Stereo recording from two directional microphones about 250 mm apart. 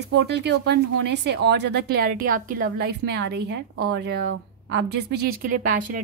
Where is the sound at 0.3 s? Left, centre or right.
Right.